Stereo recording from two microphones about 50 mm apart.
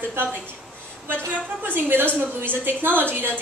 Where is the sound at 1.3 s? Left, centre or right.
Right.